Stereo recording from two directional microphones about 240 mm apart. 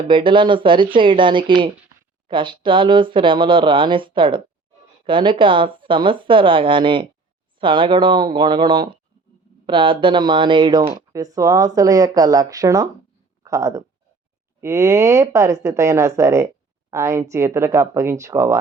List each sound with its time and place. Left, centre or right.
0.1 s speech: centre